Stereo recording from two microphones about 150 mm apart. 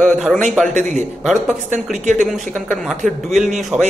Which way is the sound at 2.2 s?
5° left (ahead or behind).